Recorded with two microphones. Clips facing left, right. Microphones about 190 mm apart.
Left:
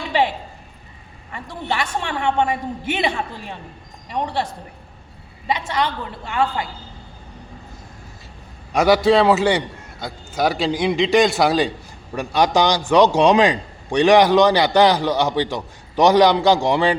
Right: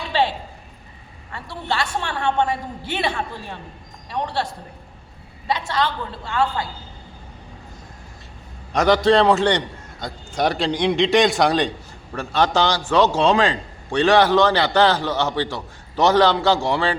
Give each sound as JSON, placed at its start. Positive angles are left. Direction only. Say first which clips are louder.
{"t": 0.1, "sound": "a woman's voice", "louder": "left 1 dB", "side_deg": 15}
{"t": 5.5, "sound": "a man's voice", "louder": "even", "side_deg": 15}
{"t": 8.7, "sound": "a man's voice", "louder": "left 1 dB", "side_deg": 10}
{"t": 12.1, "sound": "a man's voice", "louder": "left 2 dB", "side_deg": 15}